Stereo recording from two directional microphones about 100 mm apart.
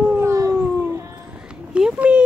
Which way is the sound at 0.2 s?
35° right (ahead or behind).